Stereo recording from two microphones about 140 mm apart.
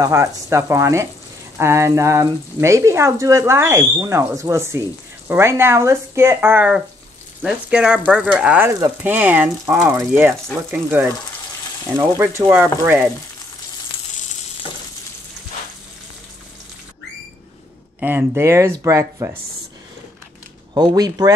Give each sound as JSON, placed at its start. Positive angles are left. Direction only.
{"t": 0.0, "sound": "speech", "side_deg": -20}
{"t": 12.2, "sound": "speech", "side_deg": -15}
{"t": 18.0, "sound": "speech", "side_deg": -15}
{"t": 20.7, "sound": "speech", "side_deg": -30}